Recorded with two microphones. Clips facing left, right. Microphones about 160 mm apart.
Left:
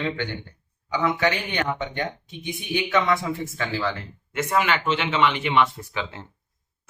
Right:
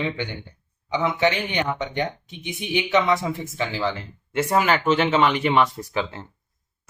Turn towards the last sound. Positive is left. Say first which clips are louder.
# right 5 dB
turn(degrees=-40)  # may be behind; listen again after turning